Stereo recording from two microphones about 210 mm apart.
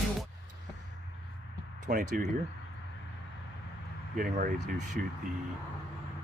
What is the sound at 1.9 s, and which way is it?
Speech, 40° right (ahead or behind).